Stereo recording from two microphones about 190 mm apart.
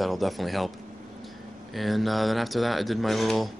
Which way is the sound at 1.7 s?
Centre (ahead or behind).